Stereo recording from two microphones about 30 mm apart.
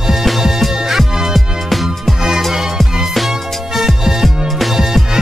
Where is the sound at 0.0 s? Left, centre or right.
Centre.